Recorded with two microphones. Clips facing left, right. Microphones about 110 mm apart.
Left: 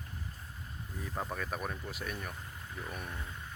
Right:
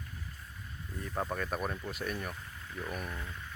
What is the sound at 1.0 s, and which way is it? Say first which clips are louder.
Speech: right 3 dB; centre (ahead or behind).